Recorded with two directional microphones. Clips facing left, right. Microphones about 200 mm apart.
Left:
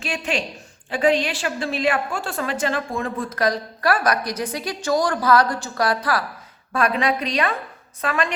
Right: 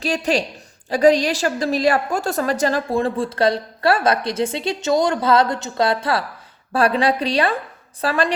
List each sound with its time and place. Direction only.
0.0 s a woman's voice: 35° right (ahead or behind)